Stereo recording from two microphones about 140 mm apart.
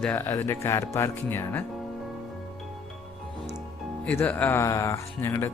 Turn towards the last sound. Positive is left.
turn(degrees=20)  # may be behind; listen again after turning